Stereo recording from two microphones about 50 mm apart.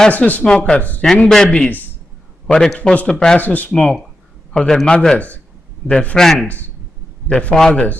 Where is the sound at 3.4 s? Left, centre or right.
Left.